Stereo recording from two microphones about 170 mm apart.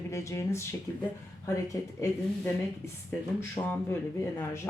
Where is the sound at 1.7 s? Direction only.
15° left (ahead or behind).